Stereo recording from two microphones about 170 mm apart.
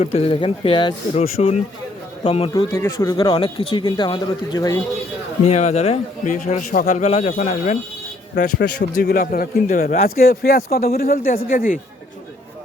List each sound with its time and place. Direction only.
0.0 s speech: 35° left (ahead or behind)
2.5 s speech: 20° left (ahead or behind)
5.5 s a man's voice: 40° left (ahead or behind)
8.5 s speech: 70° left (ahead or behind); by 11.8 s 55° left (ahead or behind)